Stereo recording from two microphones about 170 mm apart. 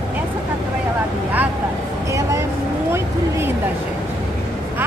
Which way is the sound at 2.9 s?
15° right (ahead or behind).